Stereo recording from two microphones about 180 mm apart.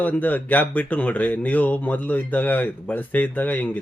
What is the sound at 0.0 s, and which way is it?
Speech, 10° left (ahead or behind).